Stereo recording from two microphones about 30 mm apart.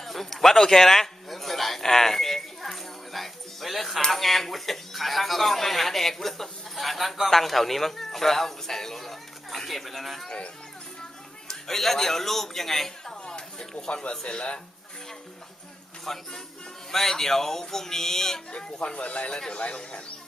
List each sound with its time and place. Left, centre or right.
0.0 s a sound: centre
4.1 s a man's voice: centre
6.7 s a man's voice: centre
11.4 s speech: centre
13.1 s a sound: left
13.9 s speech: left
16.1 s speech: centre
18.5 s speech: left
19.3 s speech: left